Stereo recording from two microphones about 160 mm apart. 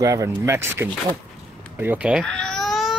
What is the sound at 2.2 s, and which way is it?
Cat, 5° left (ahead or behind).